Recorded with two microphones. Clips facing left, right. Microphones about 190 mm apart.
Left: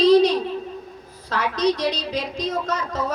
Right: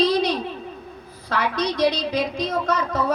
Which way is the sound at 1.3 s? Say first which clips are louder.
Left 2 dB; 55° right (ahead or behind).